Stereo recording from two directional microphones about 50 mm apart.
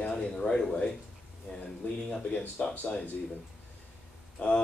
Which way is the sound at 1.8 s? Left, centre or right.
Left.